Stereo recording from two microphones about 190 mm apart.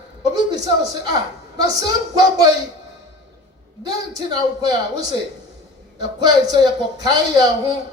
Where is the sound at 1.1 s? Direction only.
20° right (ahead or behind).